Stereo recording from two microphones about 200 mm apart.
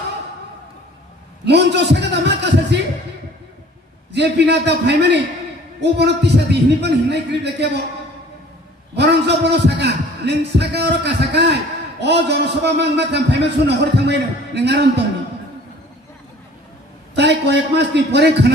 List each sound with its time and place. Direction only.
1.4 s a man's voice: 60° right (ahead or behind)
4.1 s a man's voice: 60° right (ahead or behind)
8.9 s a man's voice: 55° right (ahead or behind)
17.1 s a man's voice: 60° right (ahead or behind)